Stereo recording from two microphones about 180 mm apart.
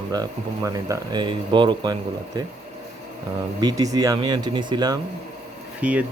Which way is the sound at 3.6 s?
20° right (ahead or behind).